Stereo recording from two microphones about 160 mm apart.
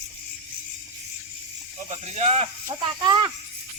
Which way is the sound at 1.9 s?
45° right (ahead or behind).